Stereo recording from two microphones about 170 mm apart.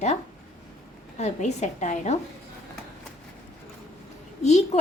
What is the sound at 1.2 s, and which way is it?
Speech, 40° left (ahead or behind).